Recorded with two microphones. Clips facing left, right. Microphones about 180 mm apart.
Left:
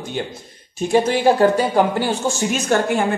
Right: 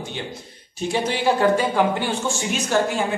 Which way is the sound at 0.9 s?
45° left (ahead or behind).